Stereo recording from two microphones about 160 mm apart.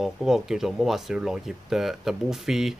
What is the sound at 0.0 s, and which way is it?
Speech, centre (ahead or behind).